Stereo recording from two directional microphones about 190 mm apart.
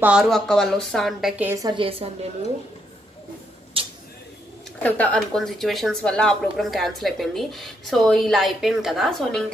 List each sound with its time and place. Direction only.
0.0 s speech: 5° right (ahead or behind)
1.5 s a woman's voice: 20° right (ahead or behind)
3.8 s a sound: 30° right (ahead or behind)
4.8 s speech: 5° left (ahead or behind)